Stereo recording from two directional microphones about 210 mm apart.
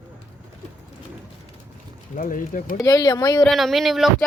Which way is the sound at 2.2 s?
40° left (ahead or behind).